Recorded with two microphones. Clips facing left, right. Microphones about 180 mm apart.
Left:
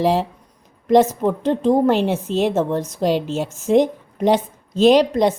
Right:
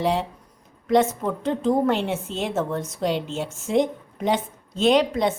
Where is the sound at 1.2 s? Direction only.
30° left (ahead or behind).